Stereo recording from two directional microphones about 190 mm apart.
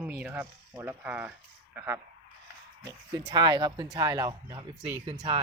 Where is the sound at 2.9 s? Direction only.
25° right (ahead or behind).